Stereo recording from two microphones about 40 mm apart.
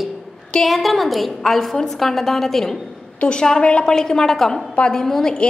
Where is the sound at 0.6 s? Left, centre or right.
Centre.